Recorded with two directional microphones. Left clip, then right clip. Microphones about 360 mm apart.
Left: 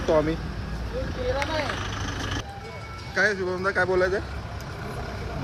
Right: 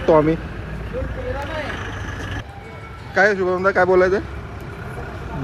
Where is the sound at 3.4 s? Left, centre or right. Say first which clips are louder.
Right 8 dB; right.